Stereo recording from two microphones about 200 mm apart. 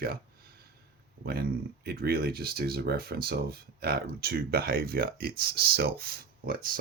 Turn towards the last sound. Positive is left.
turn(degrees=-45)  # may be behind; listen again after turning